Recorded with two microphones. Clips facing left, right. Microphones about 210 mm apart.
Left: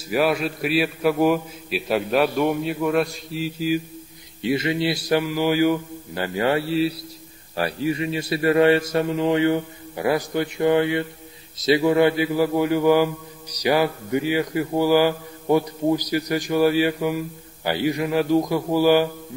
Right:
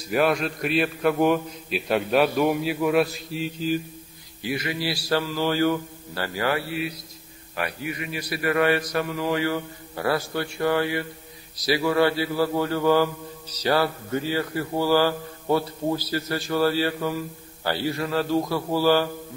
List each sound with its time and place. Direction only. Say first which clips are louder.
0.1 s a man's voice: left 1 dB; 5° left (ahead or behind)
4.4 s a man's voice: left 6 dB; 25° left (ahead or behind)